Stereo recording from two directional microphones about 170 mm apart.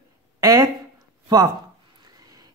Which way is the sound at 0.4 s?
20° right (ahead or behind).